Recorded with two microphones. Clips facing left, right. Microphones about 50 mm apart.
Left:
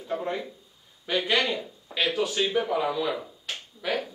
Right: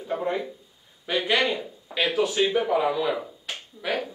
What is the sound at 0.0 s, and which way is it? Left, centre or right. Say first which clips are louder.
A man's voice: right 3 dB; centre.